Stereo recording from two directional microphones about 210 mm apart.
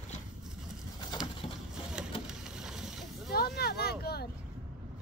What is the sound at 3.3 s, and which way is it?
Vehicle, 45° left (ahead or behind).